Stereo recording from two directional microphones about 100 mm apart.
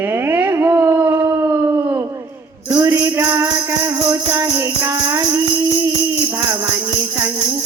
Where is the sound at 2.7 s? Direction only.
25° right (ahead or behind).